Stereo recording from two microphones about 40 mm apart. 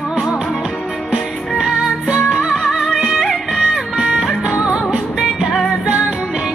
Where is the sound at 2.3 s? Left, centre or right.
Centre.